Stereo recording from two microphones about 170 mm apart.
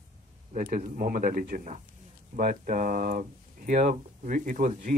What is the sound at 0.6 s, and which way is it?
A man's voice, 55° right (ahead or behind).